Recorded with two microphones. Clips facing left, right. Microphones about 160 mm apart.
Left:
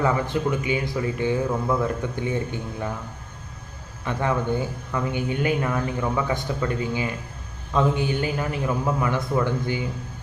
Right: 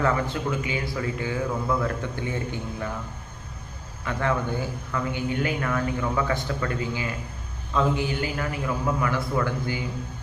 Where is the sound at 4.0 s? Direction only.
20° left (ahead or behind).